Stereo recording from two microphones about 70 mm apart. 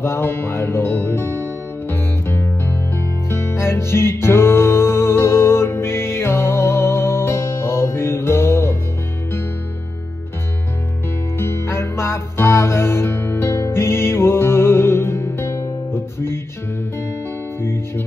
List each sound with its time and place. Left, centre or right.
0.0 s music: left
11.3 s music: left
17.6 s music: left